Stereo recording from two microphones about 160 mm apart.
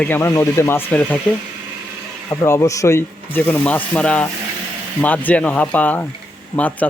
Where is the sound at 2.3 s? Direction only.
20° left (ahead or behind).